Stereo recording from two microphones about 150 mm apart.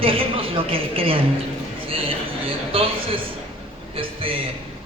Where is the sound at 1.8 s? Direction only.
40° right (ahead or behind).